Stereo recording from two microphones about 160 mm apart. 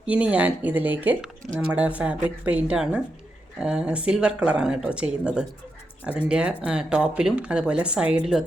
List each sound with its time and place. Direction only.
0.0 s speech: 5° right (ahead or behind)